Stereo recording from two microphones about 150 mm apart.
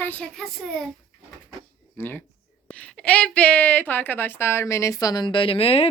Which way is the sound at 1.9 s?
15° left (ahead or behind).